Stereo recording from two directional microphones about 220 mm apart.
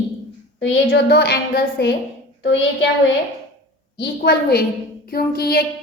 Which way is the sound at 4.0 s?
45° left (ahead or behind).